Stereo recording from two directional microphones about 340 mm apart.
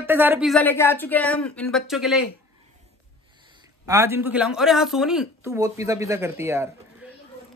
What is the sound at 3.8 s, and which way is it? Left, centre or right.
Speech, centre.